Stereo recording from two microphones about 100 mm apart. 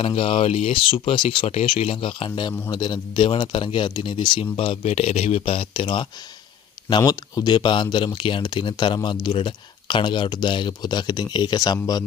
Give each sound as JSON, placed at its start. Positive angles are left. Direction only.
{"t": 0.0, "sound": "speech", "side_deg": 65}
{"t": 2.7, "sound": "speech", "side_deg": 45}
{"t": 7.0, "sound": "speech", "side_deg": 40}